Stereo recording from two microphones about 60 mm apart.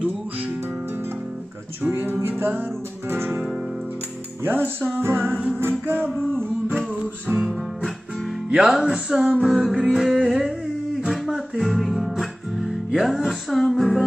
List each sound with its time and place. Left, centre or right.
1.8 s music: right
3.1 s guitar: right
4.5 s music: right
8.6 s music: centre
11.1 s guitar: centre
11.6 s music: centre